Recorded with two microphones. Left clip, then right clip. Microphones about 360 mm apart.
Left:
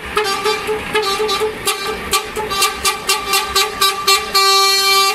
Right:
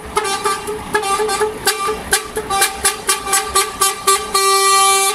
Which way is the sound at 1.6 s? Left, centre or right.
Right.